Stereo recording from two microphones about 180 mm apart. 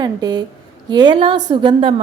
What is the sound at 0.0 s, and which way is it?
A woman's voice, 25° right (ahead or behind).